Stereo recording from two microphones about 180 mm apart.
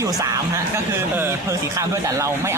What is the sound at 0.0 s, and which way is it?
A man's voice, 15° right (ahead or behind).